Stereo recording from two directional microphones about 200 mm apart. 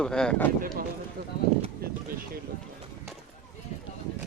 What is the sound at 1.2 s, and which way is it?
Clip-clop, 45° right (ahead or behind).